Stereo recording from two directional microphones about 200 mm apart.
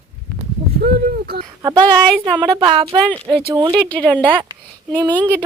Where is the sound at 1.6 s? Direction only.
20° right (ahead or behind).